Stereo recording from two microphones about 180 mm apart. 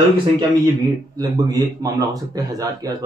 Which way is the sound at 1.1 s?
20° right (ahead or behind).